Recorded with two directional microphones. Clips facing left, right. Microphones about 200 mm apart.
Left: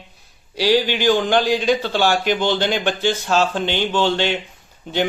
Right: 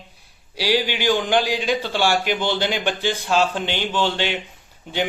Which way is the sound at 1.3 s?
10° right (ahead or behind).